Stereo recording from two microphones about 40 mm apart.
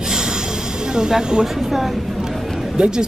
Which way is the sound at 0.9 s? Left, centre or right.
Centre.